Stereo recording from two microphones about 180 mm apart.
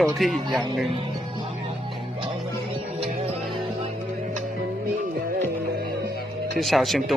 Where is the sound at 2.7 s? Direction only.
30° right (ahead or behind).